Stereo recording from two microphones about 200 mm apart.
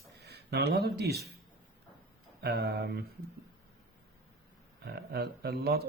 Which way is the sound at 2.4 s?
55° right (ahead or behind).